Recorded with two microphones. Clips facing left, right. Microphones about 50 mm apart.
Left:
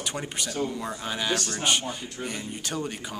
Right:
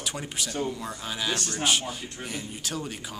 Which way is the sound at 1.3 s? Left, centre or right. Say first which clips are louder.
Left 3 dB; left.